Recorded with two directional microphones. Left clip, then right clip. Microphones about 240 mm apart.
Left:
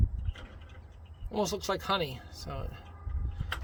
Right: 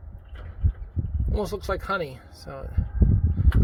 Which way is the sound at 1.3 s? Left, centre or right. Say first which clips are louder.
Right 3 dB; centre.